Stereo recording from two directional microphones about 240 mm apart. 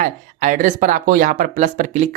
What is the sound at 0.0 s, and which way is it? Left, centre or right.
Speech, right.